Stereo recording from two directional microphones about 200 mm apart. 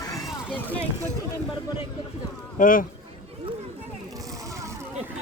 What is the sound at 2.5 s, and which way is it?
Speech, 40° left (ahead or behind).